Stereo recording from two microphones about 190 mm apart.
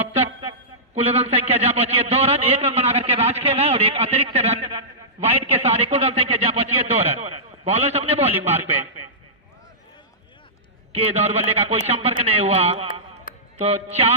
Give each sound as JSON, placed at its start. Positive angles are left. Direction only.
{"t": 1.0, "sound": "a man's voice", "side_deg": -30}
{"t": 8.3, "sound": "a man's voice", "side_deg": -10}
{"t": 10.9, "sound": "a man's voice", "side_deg": -35}